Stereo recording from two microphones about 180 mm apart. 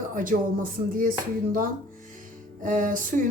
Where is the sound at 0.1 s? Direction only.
50° right (ahead or behind).